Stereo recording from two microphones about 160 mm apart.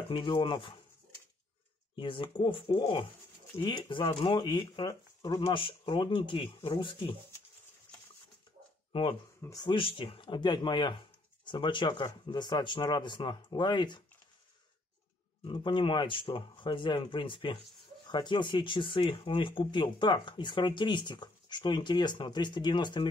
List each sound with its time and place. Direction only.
0.1 s speech: 30° left (ahead or behind)
2.0 s speech: 30° left (ahead or behind)
9.4 s speech: 25° left (ahead or behind)
15.4 s speech: 30° left (ahead or behind)